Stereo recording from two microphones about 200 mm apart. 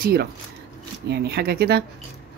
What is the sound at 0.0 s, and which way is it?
Speech, 50° right (ahead or behind).